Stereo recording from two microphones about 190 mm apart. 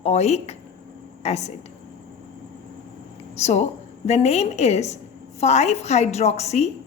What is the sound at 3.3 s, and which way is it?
A woman's voice, 35° left (ahead or behind).